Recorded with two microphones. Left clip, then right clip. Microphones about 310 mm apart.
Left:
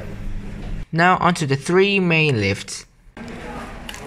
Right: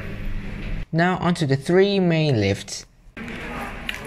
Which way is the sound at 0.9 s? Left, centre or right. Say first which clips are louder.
Left 6 dB; centre.